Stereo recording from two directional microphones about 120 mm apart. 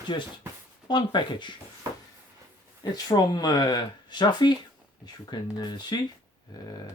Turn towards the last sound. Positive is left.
turn(degrees=40)  # may be behind; listen again after turning